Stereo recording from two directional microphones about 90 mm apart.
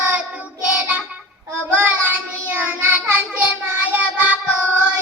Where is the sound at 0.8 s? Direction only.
15° right (ahead or behind).